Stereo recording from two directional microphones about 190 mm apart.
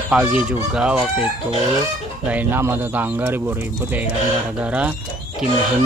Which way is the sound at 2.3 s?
10° right (ahead or behind).